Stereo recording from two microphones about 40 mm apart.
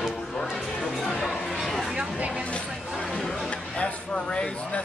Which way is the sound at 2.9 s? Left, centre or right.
Centre.